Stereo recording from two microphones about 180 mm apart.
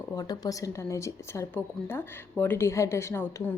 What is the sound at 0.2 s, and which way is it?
A woman's voice, 20° left (ahead or behind).